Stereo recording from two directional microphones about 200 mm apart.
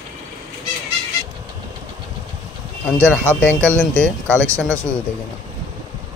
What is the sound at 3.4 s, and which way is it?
Speech, 10° left (ahead or behind).